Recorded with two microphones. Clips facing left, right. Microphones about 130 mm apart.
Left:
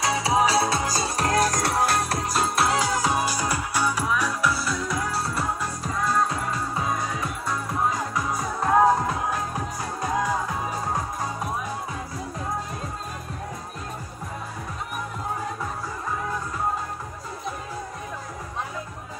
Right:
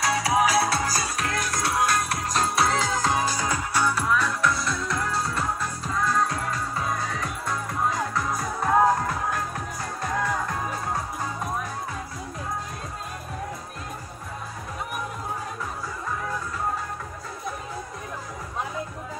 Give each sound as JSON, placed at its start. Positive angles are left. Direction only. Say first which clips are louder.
{"t": 0.0, "sound": "music", "louder": "even", "side_deg": 20}
{"t": 2.2, "sound": "music", "louder": "right 1 dB", "side_deg": 5}
{"t": 6.7, "sound": "music", "louder": "left 1 dB", "side_deg": 15}
{"t": 8.9, "sound": "music", "louder": "left 2 dB", "side_deg": 15}